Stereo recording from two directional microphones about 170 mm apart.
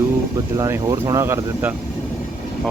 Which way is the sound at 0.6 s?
20° right (ahead or behind).